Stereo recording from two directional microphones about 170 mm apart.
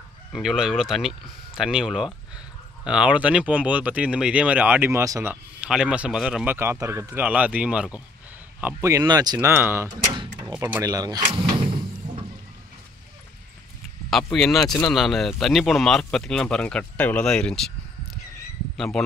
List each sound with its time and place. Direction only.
0.3 s speech: 5° right (ahead or behind)
10.4 s vehicle: 10° right (ahead or behind); by 12.3 s 30° right (ahead or behind)
14.1 s speech: centre (ahead or behind)
18.8 s speech: 5° left (ahead or behind)